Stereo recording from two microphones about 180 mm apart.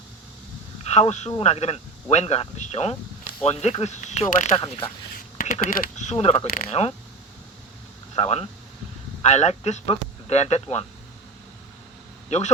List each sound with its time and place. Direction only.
0.9 s speech: 40° left (ahead or behind)
5.1 s speech: 50° left (ahead or behind)
8.1 s speech: 35° left (ahead or behind)
12.3 s speech: 40° left (ahead or behind)